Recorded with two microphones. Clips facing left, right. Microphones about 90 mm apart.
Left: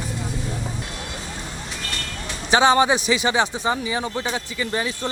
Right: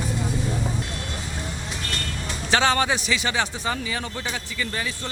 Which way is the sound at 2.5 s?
20° left (ahead or behind).